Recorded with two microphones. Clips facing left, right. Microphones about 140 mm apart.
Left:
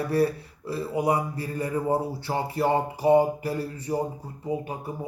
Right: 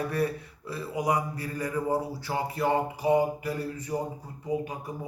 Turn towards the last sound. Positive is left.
turn(degrees=30)  # may be behind; listen again after turning